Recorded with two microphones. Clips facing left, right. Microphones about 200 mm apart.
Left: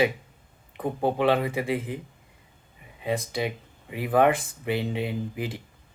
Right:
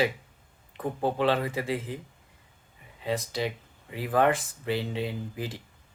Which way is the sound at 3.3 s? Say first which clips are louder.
Left 2 dB; 15° left (ahead or behind).